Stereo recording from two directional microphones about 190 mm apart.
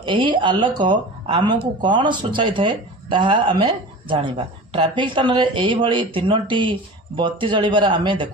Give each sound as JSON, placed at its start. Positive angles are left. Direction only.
{"t": 0.0, "sound": "speech", "side_deg": -25}